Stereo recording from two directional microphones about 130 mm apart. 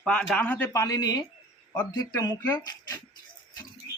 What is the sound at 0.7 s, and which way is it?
Speech, 25° left (ahead or behind).